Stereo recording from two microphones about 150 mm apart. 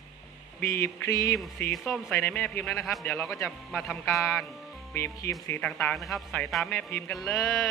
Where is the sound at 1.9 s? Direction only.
10° left (ahead or behind).